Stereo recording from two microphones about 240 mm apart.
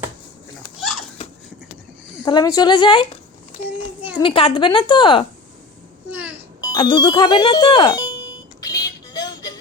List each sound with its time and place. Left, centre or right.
0.8 s a sound: centre
2.2 s a woman's voice: centre
4.2 s a woman's voice: left
6.1 s a sound: centre
6.6 s speech: centre
8.6 s music: centre